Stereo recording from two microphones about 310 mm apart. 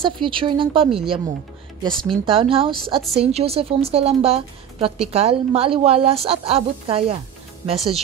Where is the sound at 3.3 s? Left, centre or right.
Centre.